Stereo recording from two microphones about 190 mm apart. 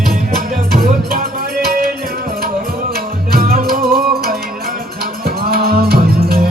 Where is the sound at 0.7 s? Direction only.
50° right (ahead or behind).